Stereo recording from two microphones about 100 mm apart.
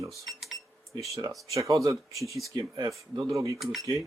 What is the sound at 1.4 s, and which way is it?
Speech, 30° right (ahead or behind).